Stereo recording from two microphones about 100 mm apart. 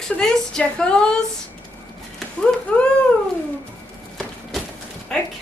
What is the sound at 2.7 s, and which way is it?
Speech, 10° left (ahead or behind).